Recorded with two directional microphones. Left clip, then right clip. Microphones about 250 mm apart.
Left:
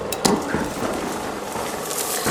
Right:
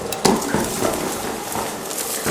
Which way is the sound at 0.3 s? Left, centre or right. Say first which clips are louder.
Right 2 dB; right.